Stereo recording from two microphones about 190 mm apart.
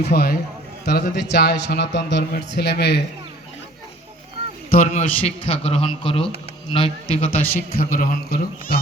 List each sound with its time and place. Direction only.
0.0 s a man's voice: 55° left (ahead or behind)
4.7 s a man's voice: 40° left (ahead or behind)
7.3 s a man's voice: 50° left (ahead or behind)